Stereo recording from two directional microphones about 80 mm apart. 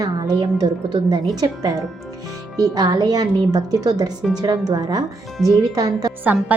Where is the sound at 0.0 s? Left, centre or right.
Right.